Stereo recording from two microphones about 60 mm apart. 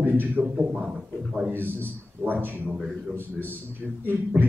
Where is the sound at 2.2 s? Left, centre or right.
Right.